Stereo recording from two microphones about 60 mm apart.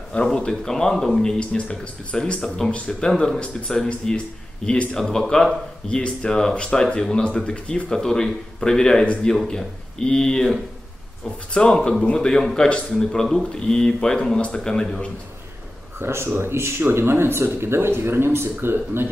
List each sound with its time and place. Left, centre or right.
0.1 s speech: centre
16.0 s speech: right